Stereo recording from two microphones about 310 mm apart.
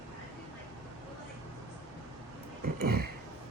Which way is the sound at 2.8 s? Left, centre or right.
Right.